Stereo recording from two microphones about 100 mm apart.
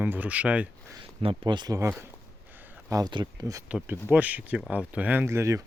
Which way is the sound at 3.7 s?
10° right (ahead or behind).